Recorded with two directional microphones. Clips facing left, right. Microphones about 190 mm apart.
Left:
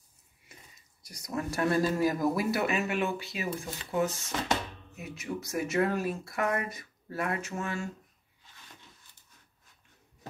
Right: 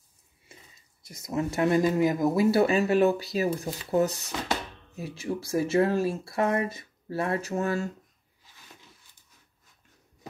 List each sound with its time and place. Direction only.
0.5 s speech: 25° right (ahead or behind)